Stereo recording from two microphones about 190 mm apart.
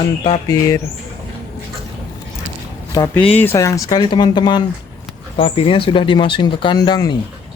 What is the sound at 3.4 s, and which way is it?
Speech, 15° left (ahead or behind).